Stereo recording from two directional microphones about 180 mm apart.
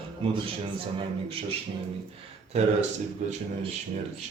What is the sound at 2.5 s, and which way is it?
Speech, 35° right (ahead or behind).